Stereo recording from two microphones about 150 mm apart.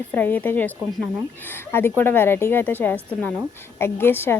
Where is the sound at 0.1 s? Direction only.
10° left (ahead or behind).